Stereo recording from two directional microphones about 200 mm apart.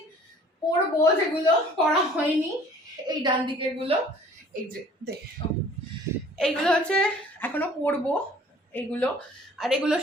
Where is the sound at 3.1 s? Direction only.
25° right (ahead or behind).